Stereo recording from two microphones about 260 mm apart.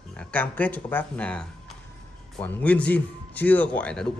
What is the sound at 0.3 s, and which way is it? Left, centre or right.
A man's voice, centre.